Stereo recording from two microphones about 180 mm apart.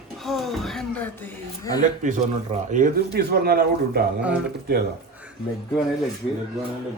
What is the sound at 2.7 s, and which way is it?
Speech, 55° right (ahead or behind).